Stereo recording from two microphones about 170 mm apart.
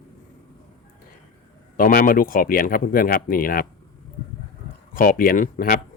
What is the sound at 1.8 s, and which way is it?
Speech, 55° left (ahead or behind).